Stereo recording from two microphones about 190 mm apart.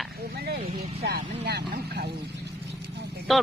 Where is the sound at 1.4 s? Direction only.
60° right (ahead or behind).